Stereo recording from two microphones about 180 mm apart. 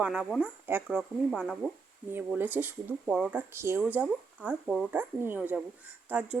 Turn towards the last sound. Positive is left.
turn(degrees=-10)  # may be behind; listen again after turning